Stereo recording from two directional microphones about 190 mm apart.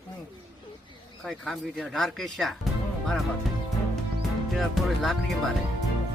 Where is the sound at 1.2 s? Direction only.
Centre (ahead or behind).